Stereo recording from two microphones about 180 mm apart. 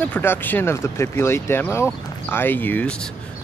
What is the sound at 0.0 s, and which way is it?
Speech, 10° left (ahead or behind).